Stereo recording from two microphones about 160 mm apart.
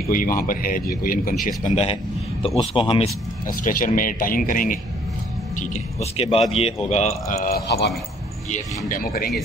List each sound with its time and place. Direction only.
0.0 s a man's voice: 60° left (ahead or behind)
1.6 s speech: 50° left (ahead or behind)
2.4 s speech: 35° left (ahead or behind)
3.4 s a man's voice: 60° left (ahead or behind)
5.6 s speech: 45° left (ahead or behind)
7.4 s speech: 80° left
8.5 s a man's voice: 55° left (ahead or behind)